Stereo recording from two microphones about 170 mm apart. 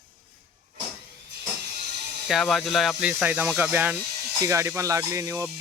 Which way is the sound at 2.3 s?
Centre (ahead or behind).